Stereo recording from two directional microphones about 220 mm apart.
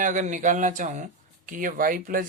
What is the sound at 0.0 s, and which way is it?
Speech, 35° right (ahead or behind).